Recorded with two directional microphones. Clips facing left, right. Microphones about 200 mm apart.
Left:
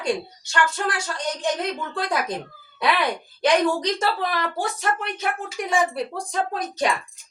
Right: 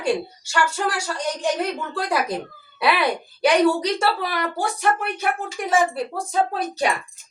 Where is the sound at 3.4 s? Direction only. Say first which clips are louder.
Right 2 dB; 10° right (ahead or behind).